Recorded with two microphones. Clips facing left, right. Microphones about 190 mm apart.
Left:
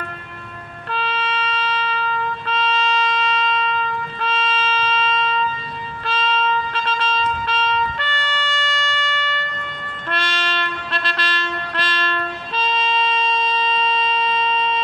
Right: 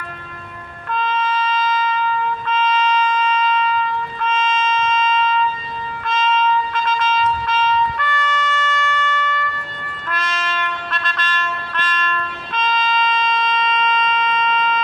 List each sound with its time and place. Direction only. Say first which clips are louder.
0.8 s music: right 4 dB; 30° left (ahead or behind)
1.3 s wind instrument: right 4 dB; 30° left (ahead or behind)
6.0 s vehicle: right 3 dB; 30° left (ahead or behind)
10.1 s train: even; 30° left (ahead or behind)